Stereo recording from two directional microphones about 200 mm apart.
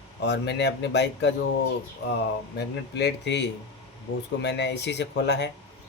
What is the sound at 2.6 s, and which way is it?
A man's voice, 60° left (ahead or behind).